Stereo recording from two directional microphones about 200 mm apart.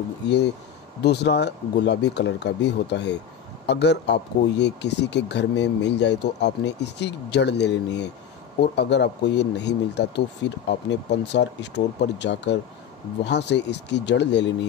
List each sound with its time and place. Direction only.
1.0 s speech: 55° left (ahead or behind)